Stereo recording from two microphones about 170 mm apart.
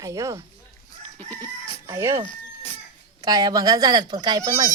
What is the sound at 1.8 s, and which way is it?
Speech, 15° right (ahead or behind).